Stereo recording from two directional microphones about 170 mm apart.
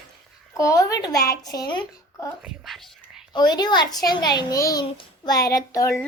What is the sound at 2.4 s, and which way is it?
Speech, 5° right (ahead or behind).